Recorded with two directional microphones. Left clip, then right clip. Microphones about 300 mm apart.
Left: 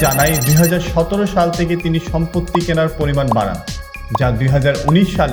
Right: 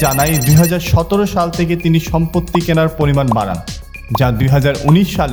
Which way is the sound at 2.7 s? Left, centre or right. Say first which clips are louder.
Right 4 dB; centre.